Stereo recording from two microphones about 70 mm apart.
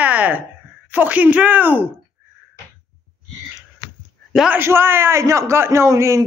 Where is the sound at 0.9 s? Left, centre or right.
Right.